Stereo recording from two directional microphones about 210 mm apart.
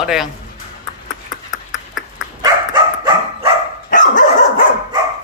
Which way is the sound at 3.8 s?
40° left (ahead or behind).